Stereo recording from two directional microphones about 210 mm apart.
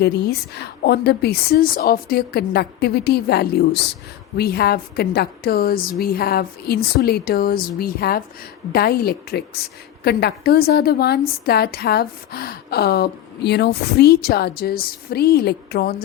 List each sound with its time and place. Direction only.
0.0 s a woman's voice: 50° left (ahead or behind)